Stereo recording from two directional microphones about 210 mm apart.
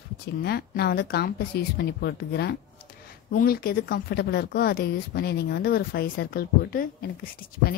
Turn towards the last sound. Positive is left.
turn(degrees=45)  # may be behind; listen again after turning